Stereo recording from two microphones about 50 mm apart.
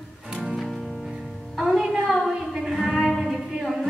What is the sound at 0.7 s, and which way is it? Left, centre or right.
Music, centre.